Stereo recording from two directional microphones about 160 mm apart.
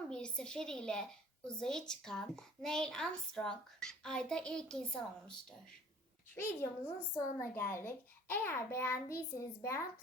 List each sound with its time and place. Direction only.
0.1 s a woman's voice: 5° left (ahead or behind)